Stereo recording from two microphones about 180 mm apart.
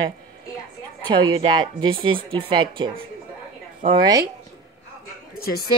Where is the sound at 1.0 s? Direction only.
25° right (ahead or behind).